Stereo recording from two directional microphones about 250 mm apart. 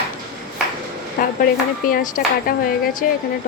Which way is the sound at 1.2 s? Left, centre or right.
Left.